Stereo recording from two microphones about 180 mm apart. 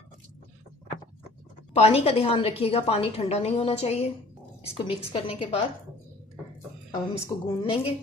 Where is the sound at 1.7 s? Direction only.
35° left (ahead or behind).